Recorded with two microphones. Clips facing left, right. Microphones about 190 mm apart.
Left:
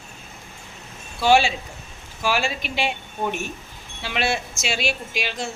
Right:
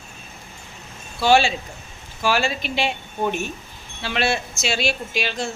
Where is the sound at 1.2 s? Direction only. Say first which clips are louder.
Right 1 dB; 15° left (ahead or behind).